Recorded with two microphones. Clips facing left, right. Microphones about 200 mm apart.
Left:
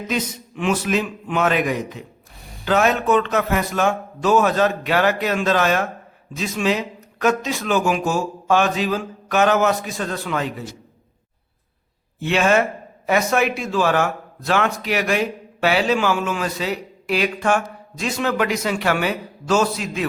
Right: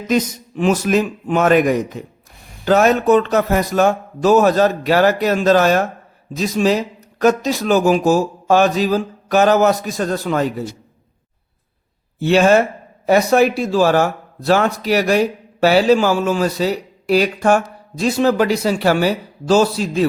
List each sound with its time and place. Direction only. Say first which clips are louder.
0.1 s a man's voice: right 9 dB; 40° right (ahead or behind)
12.2 s a man's voice: right 5 dB; 35° right (ahead or behind)